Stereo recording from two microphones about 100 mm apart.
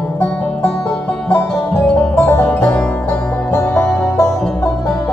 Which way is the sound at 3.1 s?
20° left (ahead or behind).